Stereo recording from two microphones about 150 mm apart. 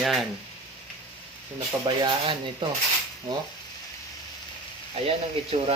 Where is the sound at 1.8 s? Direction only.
30° right (ahead or behind).